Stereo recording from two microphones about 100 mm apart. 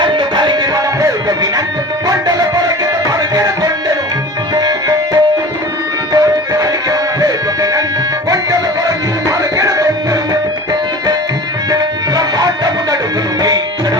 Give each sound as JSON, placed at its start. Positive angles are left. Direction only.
{"t": 0.0, "sound": "music", "side_deg": -55}
{"t": 2.0, "sound": "music", "side_deg": -40}
{"t": 9.6, "sound": "music", "side_deg": -35}
{"t": 11.7, "sound": "music", "side_deg": -40}